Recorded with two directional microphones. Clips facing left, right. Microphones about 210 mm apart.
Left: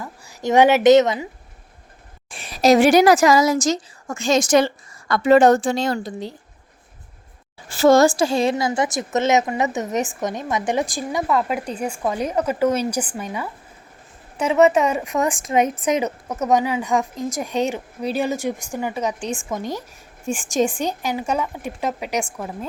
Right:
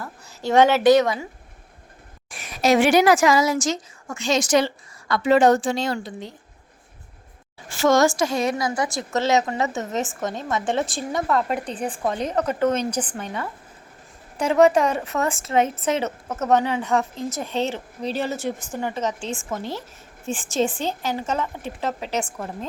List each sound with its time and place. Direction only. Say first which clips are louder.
0.0 s a woman's voice: left 3 dB; 15° left (ahead or behind)
2.3 s a woman's voice: left 4 dB; 30° left (ahead or behind)
7.7 s a woman's voice: left 4 dB; 35° left (ahead or behind); by 11.0 s 15° left (ahead or behind)
11.1 s speech: left 1 dB; 5° left (ahead or behind)